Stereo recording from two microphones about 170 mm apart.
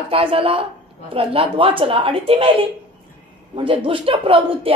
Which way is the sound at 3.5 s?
30° right (ahead or behind).